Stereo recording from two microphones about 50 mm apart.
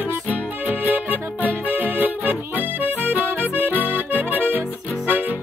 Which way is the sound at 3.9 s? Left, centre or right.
Right.